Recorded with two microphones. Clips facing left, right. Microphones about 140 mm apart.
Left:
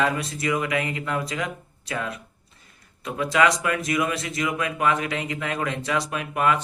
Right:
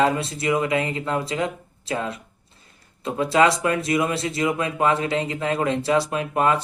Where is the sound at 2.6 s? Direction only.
30° right (ahead or behind).